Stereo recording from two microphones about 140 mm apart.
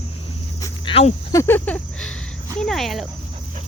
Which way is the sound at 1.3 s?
15° left (ahead or behind).